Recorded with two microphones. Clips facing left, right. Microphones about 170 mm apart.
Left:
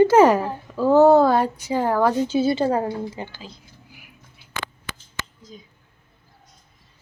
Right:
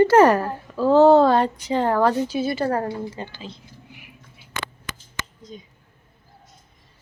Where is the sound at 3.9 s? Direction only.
Centre (ahead or behind).